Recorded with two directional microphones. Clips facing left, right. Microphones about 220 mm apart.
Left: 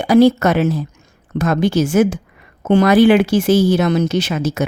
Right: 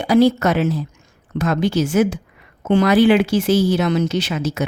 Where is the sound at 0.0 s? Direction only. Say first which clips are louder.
Left 3 dB; 50° left (ahead or behind).